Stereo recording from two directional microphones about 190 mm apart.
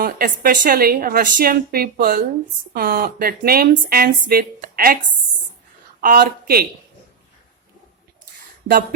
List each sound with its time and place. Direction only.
0.0 s speech: 50° right (ahead or behind)
6.0 s speech: 50° right (ahead or behind)